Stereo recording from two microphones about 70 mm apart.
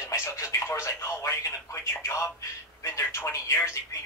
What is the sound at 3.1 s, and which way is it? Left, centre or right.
Telephone, left.